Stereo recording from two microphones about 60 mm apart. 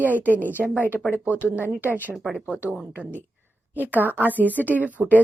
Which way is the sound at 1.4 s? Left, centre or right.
Right.